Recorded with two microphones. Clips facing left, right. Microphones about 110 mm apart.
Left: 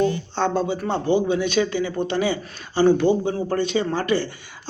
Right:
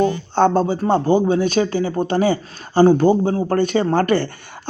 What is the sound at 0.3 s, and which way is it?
Speech, 45° right (ahead or behind).